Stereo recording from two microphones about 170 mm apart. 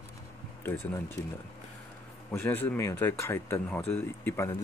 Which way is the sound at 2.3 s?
10° left (ahead or behind).